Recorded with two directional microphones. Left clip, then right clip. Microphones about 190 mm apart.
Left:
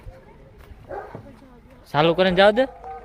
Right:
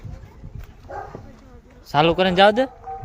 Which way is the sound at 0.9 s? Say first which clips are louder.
Even; 50° right (ahead or behind).